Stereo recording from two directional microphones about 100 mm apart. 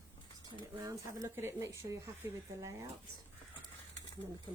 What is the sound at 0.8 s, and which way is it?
Speech, 35° right (ahead or behind).